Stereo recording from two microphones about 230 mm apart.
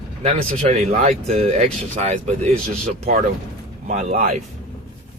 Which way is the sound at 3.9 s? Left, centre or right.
Right.